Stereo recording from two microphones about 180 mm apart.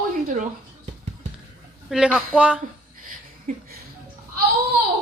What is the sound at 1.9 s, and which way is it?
Speech, 5° right (ahead or behind).